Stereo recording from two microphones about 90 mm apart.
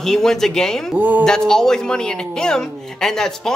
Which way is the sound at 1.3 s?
5° left (ahead or behind).